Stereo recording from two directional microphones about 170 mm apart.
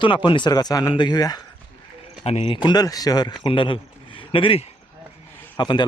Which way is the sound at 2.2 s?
35° left (ahead or behind).